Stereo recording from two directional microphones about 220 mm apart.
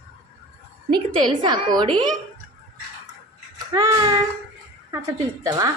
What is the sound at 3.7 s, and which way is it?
A woman's voice, 15° right (ahead or behind).